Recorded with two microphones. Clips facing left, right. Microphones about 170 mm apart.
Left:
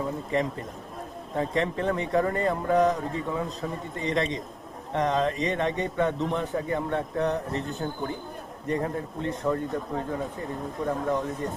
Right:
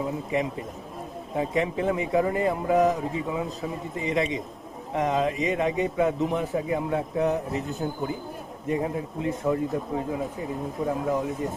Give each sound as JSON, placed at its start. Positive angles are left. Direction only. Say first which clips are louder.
{"t": 0.0, "sound": "a man's voice", "louder": "even", "side_deg": -5}